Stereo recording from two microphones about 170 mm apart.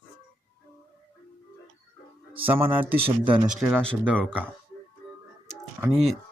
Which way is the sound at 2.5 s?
10° right (ahead or behind).